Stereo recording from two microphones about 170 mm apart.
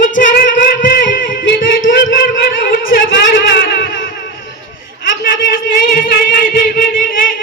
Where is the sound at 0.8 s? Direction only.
55° left (ahead or behind).